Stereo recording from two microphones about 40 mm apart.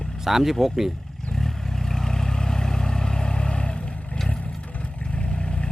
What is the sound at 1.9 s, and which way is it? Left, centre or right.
Vehicle, centre.